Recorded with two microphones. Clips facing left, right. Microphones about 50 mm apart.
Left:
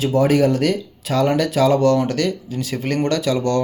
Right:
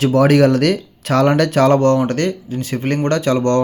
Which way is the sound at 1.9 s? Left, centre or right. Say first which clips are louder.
Right 2 dB; right.